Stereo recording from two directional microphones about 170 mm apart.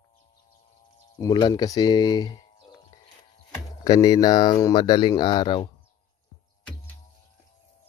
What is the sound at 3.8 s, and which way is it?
Speech, 20° left (ahead or behind).